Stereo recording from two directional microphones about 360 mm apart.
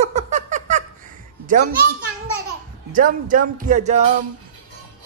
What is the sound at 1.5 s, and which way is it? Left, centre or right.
Speech, right.